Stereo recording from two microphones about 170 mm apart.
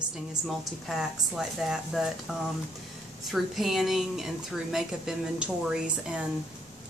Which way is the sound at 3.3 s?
Centre (ahead or behind).